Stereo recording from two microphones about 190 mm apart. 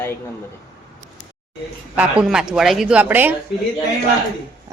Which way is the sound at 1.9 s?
5° right (ahead or behind).